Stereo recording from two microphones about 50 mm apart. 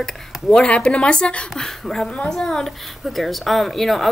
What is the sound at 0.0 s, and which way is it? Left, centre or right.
A woman's voice, centre.